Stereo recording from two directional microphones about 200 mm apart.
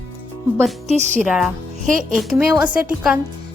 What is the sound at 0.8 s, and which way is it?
Speech, 35° right (ahead or behind).